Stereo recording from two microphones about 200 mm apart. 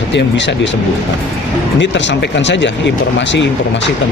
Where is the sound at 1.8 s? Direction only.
65° left (ahead or behind).